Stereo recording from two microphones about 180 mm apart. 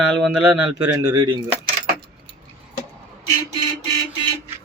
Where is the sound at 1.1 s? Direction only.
25° right (ahead or behind).